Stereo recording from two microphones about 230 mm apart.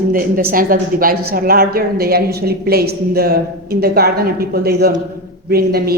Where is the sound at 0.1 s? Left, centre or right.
Right.